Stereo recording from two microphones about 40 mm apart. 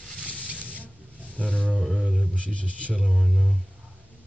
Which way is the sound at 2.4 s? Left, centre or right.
Left.